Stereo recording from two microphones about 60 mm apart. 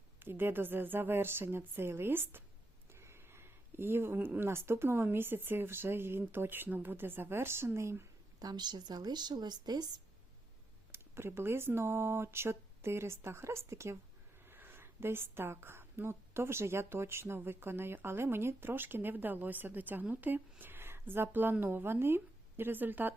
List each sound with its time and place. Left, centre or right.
0.2 s a woman's voice: right
2.9 s a sound: right
4.4 s a woman's voice: right
8.4 s a woman's voice: right
10.9 s speech: right
14.4 s a woman's voice: right